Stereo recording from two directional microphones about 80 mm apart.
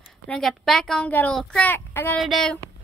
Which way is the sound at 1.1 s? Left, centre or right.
Left.